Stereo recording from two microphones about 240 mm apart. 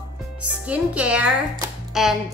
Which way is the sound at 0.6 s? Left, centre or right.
Centre.